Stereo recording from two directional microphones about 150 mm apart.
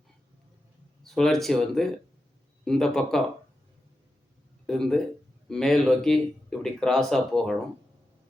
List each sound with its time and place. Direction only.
1.0 s speech: centre (ahead or behind)
4.6 s speech: 5° left (ahead or behind)